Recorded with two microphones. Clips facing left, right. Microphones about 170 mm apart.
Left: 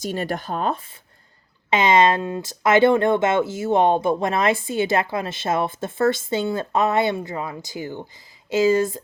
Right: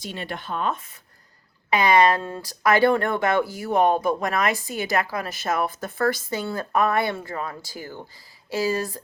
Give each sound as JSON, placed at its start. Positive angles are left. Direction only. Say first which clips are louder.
{"t": 0.0, "sound": "speech", "louder": "left 7 dB", "side_deg": 45}
{"t": 1.7, "sound": "speech", "louder": "left 1 dB", "side_deg": 20}